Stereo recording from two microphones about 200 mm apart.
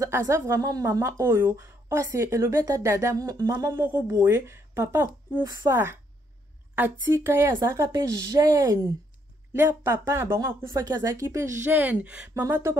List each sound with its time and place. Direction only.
0.0 s speech: 15° right (ahead or behind)